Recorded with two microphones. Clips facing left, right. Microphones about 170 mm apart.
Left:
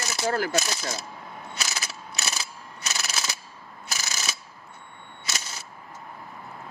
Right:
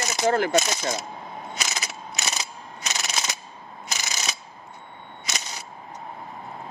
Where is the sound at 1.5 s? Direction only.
20° right (ahead or behind).